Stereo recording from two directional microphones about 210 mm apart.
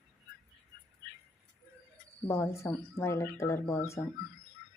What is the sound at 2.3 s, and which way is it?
Speech, 10° left (ahead or behind).